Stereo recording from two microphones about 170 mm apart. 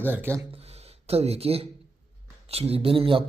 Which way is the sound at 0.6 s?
35° right (ahead or behind).